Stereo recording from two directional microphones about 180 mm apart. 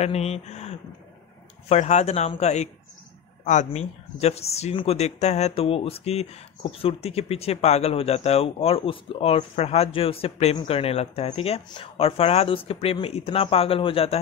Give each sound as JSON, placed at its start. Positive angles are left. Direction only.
{"t": 0.0, "sound": "speech", "side_deg": 35}